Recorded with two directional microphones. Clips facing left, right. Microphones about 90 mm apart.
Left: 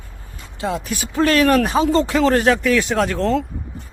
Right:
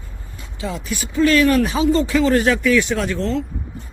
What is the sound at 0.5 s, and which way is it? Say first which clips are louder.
Speech: left 3 dB; 55° left (ahead or behind).